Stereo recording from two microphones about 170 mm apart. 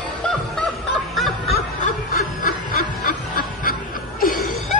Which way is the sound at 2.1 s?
55° left (ahead or behind).